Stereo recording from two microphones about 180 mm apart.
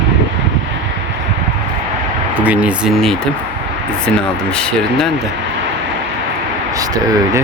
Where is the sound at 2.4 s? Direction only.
5° right (ahead or behind).